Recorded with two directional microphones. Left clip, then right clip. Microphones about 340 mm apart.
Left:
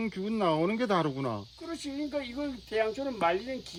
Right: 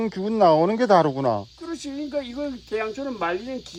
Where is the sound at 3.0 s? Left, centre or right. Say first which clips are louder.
Right 2 dB; centre.